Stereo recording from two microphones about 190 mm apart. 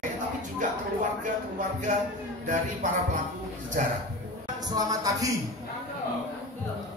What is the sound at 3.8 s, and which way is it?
Speech, 45° right (ahead or behind).